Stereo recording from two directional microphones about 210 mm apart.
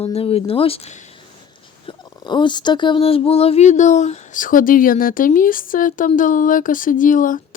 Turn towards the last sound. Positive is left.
turn(degrees=40)  # may be behind; listen again after turning